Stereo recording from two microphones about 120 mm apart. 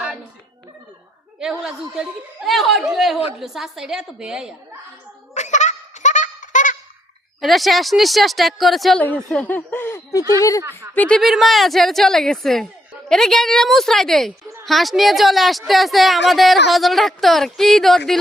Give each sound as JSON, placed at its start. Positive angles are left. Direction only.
{"t": 1.4, "sound": "a woman's voice", "side_deg": -5}
{"t": 5.3, "sound": "honk", "side_deg": 80}
{"t": 7.4, "sound": "a woman's voice", "side_deg": 0}
{"t": 9.0, "sound": "speech", "side_deg": 10}
{"t": 10.9, "sound": "speech", "side_deg": 10}
{"t": 11.2, "sound": "a woman's voice", "side_deg": 0}